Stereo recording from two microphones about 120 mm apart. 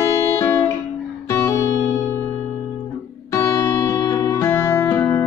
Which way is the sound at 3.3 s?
20° left (ahead or behind).